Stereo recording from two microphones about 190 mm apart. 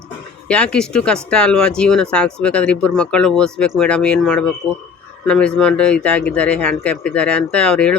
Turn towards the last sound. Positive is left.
turn(degrees=5)  # may be behind; listen again after turning